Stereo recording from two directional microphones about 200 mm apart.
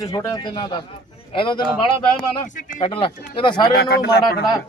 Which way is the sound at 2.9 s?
25° left (ahead or behind).